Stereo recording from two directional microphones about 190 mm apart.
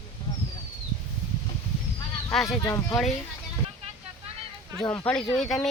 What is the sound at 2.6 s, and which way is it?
Speech, 15° left (ahead or behind).